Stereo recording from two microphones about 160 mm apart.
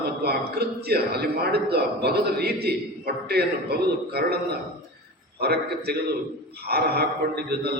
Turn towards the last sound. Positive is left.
turn(degrees=-90)